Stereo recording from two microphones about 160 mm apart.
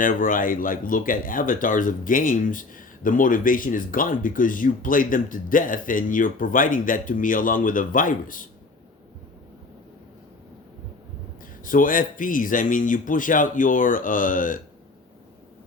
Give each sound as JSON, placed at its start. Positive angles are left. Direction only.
{"t": 0.0, "sound": "speech", "side_deg": 55}
{"t": 11.6, "sound": "speech", "side_deg": 60}